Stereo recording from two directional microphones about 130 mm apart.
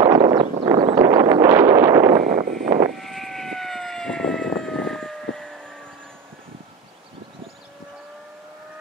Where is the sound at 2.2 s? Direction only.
90° right.